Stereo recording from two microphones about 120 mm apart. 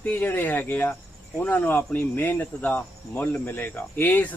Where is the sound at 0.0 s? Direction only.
15° left (ahead or behind).